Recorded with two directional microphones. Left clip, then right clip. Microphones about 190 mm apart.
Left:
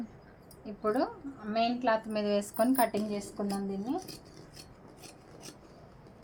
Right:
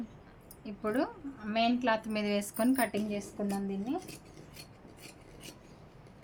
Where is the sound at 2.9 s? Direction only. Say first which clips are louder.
Left 1 dB; centre (ahead or behind).